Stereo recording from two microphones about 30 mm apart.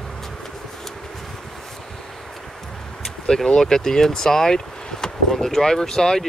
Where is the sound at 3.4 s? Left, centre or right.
Left.